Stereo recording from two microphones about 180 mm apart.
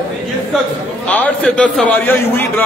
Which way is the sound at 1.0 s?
5° left (ahead or behind).